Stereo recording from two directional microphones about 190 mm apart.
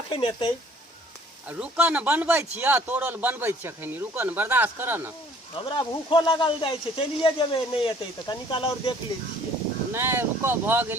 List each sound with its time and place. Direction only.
0.1 s speech: 25° left (ahead or behind)
1.5 s speech: 5° right (ahead or behind)
5.6 s speech: 25° left (ahead or behind)
9.9 s speech: 10° right (ahead or behind)